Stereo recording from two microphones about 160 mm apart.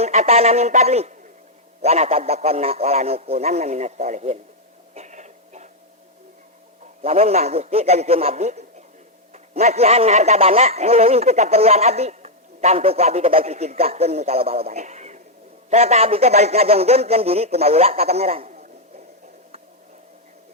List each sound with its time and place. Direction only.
0.0 s a man's voice: 45° right (ahead or behind)
4.9 s a sound: 45° right (ahead or behind)
7.0 s a man's voice: 40° right (ahead or behind)